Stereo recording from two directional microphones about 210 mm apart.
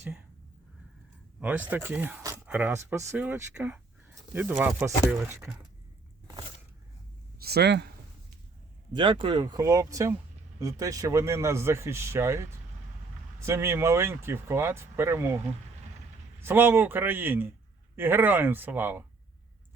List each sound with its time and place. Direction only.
1.4 s speech: 5° right (ahead or behind)
7.3 s speech: 50° right (ahead or behind)
8.9 s speech: 20° right (ahead or behind)
16.4 s speech: 10° right (ahead or behind)